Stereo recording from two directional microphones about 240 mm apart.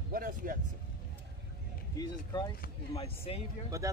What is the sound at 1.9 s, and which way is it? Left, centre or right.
A man's voice, centre.